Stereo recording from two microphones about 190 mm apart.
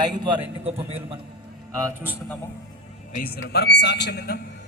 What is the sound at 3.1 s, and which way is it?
A man's voice, 55° left (ahead or behind).